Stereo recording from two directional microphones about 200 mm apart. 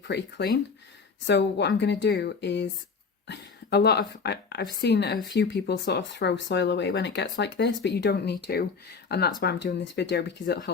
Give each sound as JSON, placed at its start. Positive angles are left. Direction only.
{"t": 0.1, "sound": "a woman's voice", "side_deg": 60}